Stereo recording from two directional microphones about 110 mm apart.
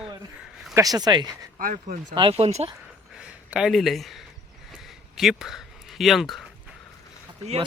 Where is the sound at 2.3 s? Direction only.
75° right (ahead or behind).